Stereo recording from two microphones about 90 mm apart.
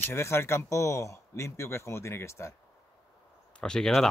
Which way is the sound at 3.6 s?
10° left (ahead or behind).